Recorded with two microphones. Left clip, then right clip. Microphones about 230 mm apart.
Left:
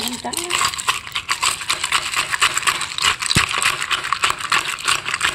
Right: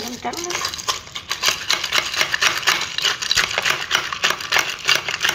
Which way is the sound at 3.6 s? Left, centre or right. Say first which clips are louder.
Even; left.